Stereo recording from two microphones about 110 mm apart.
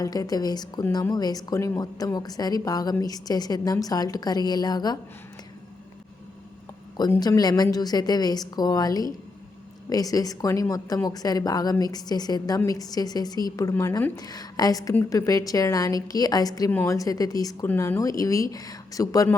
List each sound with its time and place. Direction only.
0.0 s a woman's voice: 35° left (ahead or behind)
7.2 s a woman's voice: 35° left (ahead or behind)